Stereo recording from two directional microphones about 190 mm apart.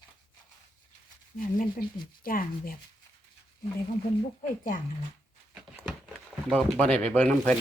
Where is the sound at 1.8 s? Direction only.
55° left (ahead or behind).